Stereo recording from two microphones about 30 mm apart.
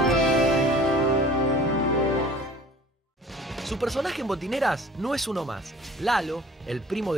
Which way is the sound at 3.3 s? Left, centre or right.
Centre.